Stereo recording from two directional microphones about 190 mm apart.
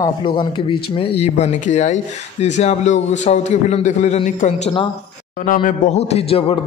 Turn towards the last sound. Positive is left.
turn(degrees=30)  # may be behind; listen again after turning